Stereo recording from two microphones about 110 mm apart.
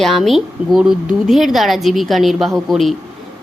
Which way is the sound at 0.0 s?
Centre (ahead or behind).